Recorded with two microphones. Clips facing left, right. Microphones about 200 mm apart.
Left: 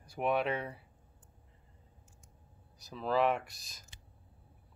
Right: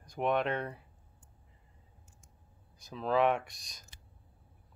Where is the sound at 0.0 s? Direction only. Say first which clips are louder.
Right 1 dB; 5° left (ahead or behind).